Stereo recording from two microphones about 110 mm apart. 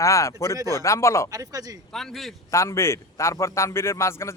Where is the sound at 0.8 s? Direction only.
25° left (ahead or behind).